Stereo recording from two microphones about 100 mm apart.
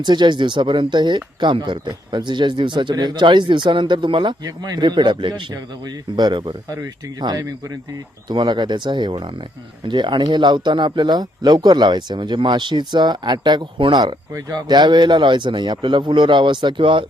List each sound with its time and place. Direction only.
0.0 s speech: 50° right (ahead or behind)